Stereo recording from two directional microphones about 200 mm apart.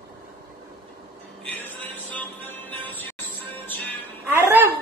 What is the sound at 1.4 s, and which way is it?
Music, 10° left (ahead or behind).